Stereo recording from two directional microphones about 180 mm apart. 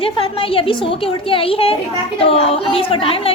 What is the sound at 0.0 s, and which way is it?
A woman's voice, 30° left (ahead or behind).